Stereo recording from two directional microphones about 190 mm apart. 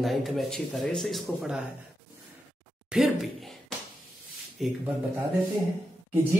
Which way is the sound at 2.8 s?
Centre (ahead or behind).